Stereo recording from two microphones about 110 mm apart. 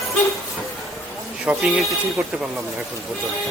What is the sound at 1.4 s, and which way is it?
Speech, 10° right (ahead or behind).